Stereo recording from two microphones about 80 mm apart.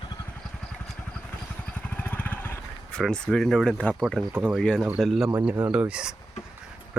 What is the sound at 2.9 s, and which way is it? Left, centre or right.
Speech, centre.